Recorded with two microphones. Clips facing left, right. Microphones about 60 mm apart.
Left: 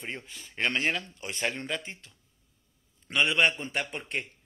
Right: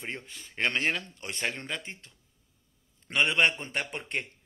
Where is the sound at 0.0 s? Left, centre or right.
Centre.